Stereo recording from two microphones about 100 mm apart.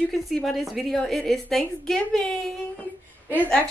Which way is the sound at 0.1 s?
Centre (ahead or behind).